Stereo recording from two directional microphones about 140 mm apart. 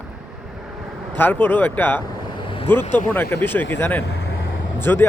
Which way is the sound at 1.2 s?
15° left (ahead or behind).